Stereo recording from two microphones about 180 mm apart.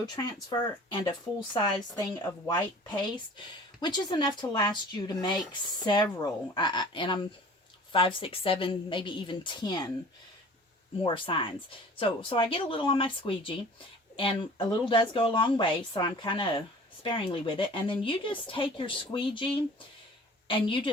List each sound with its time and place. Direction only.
0.5 s speech: 25° left (ahead or behind)
11.0 s speech: 30° left (ahead or behind)